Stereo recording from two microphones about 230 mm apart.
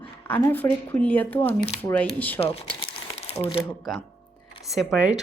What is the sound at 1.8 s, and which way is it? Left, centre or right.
Speech, centre.